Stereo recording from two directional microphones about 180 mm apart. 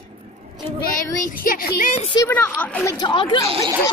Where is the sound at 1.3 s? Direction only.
50° left (ahead or behind).